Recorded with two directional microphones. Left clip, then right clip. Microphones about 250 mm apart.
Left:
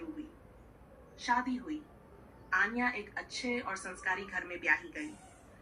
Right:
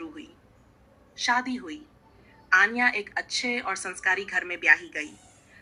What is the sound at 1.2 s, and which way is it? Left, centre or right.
A woman's voice, right.